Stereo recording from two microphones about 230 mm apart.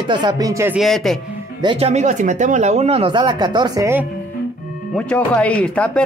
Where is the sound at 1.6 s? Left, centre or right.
Right.